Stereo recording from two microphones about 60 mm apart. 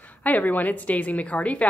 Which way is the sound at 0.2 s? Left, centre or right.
Left.